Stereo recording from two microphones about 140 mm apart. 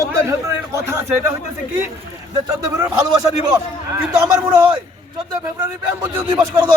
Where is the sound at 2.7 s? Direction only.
20° right (ahead or behind).